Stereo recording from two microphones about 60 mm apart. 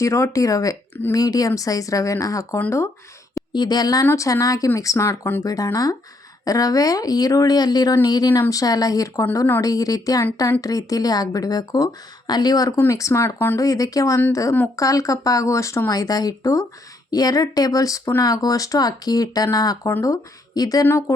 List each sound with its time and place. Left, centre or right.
0.0 s speech: left
1.1 s speech: left
2.6 s speech: left
3.3 s speech: left
4.1 s speech: left
5.4 s speech: left
8.1 s speech: left
12.9 s speech: left
13.6 s speech: left
15.9 s speech: left
17.1 s speech: left
18.2 s speech: left
20.0 s speech: left